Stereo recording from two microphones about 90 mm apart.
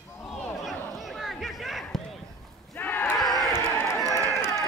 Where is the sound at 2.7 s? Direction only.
25° left (ahead or behind).